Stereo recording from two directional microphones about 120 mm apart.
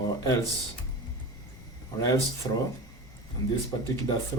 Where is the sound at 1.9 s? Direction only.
30° left (ahead or behind).